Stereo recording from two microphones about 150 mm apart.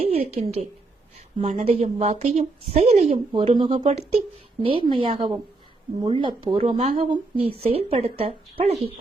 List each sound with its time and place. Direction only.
0.0 s a sound: 45° right (ahead or behind)
1.4 s a woman's voice: 60° right (ahead or behind)
1.6 s a woman's voice: 45° right (ahead or behind)
6.7 s a woman's voice: 45° right (ahead or behind)